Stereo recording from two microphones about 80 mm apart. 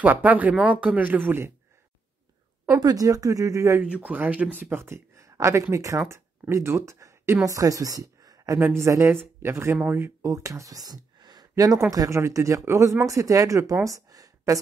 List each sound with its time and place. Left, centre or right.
0.0 s speech: right
2.8 s speech: right
3.8 s speech: centre
10.2 s speech: right
13.8 s a sound: right